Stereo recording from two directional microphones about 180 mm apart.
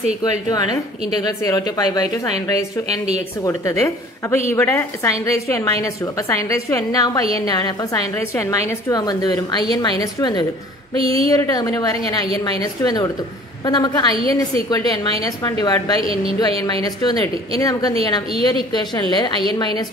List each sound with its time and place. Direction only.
0.2 s a woman's voice: 20° left (ahead or behind)
3.4 s a woman's voice: 15° left (ahead or behind)
11.0 s speech: 30° right (ahead or behind)
11.2 s a woman's voice: 20° left (ahead or behind)
16.0 s speech: 30° right (ahead or behind)
16.3 s a woman's voice: 20° left (ahead or behind)